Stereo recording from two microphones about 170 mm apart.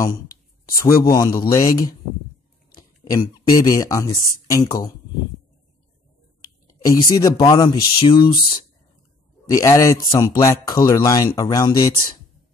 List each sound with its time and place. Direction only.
0.7 s speech: 20° left (ahead or behind)
3.1 s speech: 25° left (ahead or behind)
6.7 s speech: 20° left (ahead or behind)
9.5 s speech: 20° left (ahead or behind)